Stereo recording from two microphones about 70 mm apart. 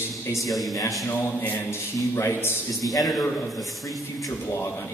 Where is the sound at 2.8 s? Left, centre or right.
Centre.